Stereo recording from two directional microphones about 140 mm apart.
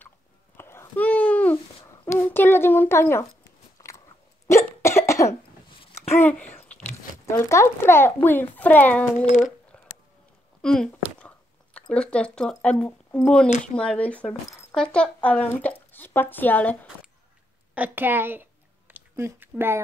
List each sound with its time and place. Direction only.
0.6 s babbling: 15° left (ahead or behind)
2.0 s a child's voice: 15° left (ahead or behind)
3.8 s biting: 25° left (ahead or behind)
4.5 s cough: 20° left (ahead or behind)
6.1 s a child's voice: 10° left (ahead or behind)
9.2 s speech: 60° left (ahead or behind)
10.6 s a sound: 5° left (ahead or behind)
13.7 s speech: 10° left (ahead or behind)
17.7 s a sound: 15° right (ahead or behind)